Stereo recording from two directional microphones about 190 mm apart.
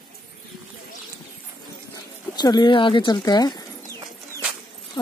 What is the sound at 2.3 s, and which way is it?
Speech, 20° left (ahead or behind).